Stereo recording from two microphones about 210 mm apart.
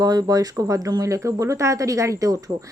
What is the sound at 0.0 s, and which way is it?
Speech, 20° right (ahead or behind).